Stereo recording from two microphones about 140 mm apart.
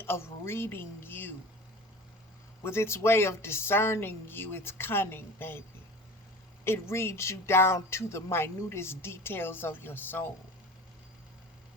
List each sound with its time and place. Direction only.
0.0 s a woman's voice: 15° left (ahead or behind)
2.6 s speech: 20° left (ahead or behind)
6.7 s speech: 15° left (ahead or behind)